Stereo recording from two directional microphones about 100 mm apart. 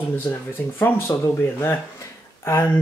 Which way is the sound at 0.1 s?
20° left (ahead or behind).